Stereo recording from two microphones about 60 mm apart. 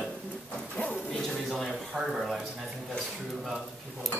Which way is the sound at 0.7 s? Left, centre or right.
Left.